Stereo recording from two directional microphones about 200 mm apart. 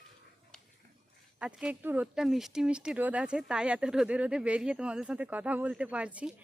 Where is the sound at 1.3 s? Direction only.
5° right (ahead or behind).